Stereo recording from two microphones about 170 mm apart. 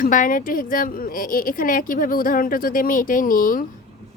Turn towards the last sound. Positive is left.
turn(degrees=55)  # may be behind; listen again after turning